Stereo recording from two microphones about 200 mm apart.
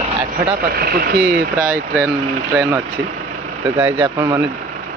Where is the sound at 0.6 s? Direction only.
50° right (ahead or behind).